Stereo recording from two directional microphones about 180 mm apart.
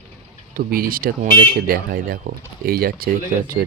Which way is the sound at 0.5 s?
55° right (ahead or behind).